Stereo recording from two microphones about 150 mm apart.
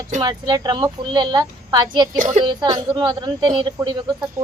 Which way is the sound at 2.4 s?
30° right (ahead or behind).